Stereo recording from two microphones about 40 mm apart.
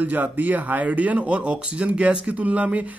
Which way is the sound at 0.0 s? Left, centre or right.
Right.